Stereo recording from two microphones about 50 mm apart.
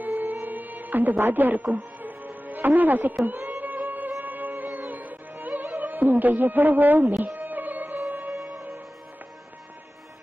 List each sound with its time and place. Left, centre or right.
0.1 s music: right